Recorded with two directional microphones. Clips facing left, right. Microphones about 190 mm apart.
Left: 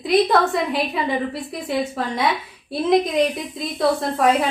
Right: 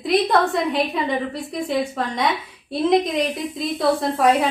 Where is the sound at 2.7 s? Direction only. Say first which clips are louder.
Even; centre (ahead or behind).